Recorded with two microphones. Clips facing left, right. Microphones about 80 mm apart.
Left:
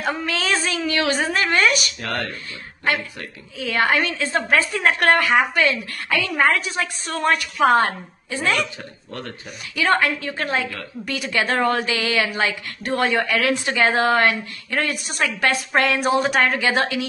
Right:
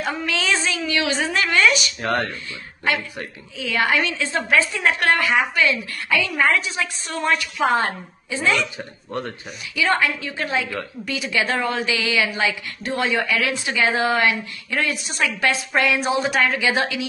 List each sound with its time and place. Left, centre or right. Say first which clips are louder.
0.3 s child singing: right 2 dB; left
0.7 s a sound: left 1 dB; left
2.0 s speech: right 4 dB; right
3.5 s a woman's voice: left 1 dB; left
9.8 s a woman's voice: left 1 dB; left